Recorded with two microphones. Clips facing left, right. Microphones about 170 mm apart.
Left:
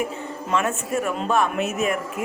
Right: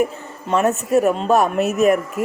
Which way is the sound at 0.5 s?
40° right (ahead or behind).